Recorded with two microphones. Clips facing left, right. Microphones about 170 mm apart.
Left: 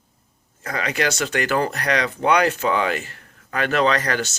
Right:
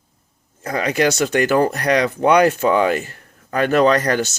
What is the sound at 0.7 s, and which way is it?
Speech, 40° right (ahead or behind).